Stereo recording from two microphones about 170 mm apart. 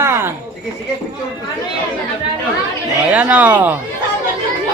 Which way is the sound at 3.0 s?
10° right (ahead or behind).